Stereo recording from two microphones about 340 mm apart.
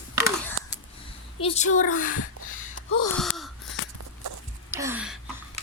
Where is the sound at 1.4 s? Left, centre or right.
Centre.